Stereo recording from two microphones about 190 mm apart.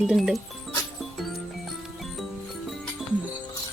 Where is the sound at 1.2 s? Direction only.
Centre (ahead or behind).